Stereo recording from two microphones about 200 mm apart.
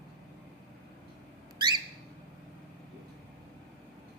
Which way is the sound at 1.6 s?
20° right (ahead or behind).